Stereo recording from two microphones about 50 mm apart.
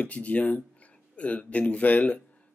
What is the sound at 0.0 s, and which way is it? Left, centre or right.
Speech, left.